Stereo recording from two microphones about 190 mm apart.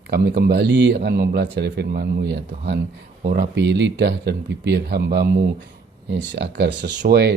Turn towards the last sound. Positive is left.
turn(degrees=-60)  # may be behind; listen again after turning